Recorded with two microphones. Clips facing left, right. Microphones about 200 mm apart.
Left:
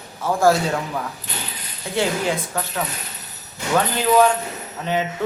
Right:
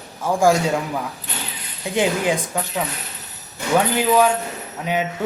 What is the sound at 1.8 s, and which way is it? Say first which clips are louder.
Speech: right 2 dB; 15° right (ahead or behind).